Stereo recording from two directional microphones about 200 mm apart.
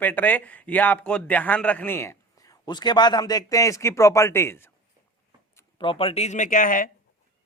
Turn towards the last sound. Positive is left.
turn(degrees=40)  # may be behind; listen again after turning